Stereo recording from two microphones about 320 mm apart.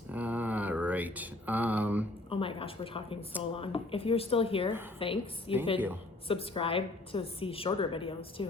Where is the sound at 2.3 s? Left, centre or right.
Centre.